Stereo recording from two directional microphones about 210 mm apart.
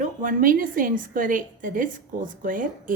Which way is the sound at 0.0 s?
40° right (ahead or behind).